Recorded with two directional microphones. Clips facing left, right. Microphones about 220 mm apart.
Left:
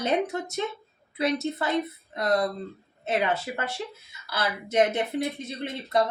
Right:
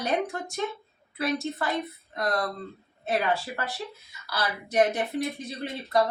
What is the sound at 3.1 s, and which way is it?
A woman's voice, 20° left (ahead or behind).